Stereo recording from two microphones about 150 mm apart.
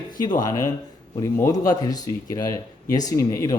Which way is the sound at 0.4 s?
20° left (ahead or behind).